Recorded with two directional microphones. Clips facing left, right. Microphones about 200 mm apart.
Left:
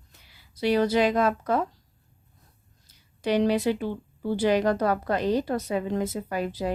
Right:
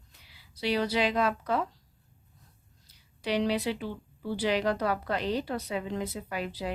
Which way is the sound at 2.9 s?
45° left (ahead or behind).